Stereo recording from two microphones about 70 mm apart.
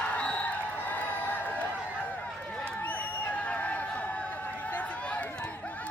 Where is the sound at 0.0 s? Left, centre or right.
Centre.